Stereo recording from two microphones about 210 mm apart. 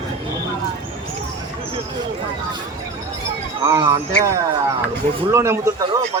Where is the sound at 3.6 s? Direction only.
15° right (ahead or behind).